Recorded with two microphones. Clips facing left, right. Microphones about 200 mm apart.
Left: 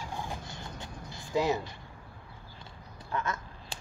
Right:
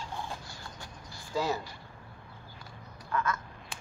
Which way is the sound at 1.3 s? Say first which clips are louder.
Left 3 dB; 20° left (ahead or behind).